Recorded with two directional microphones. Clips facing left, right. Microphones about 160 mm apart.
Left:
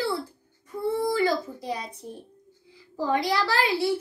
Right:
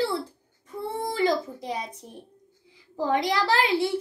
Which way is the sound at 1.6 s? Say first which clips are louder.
Even; 20° right (ahead or behind).